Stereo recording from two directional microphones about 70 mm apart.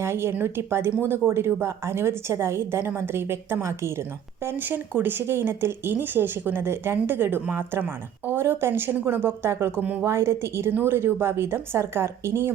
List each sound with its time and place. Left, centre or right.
0.0 s speech: right
4.4 s speech: right